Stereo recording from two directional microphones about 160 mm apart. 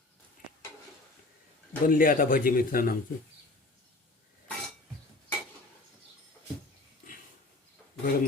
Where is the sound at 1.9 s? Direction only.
60° left (ahead or behind).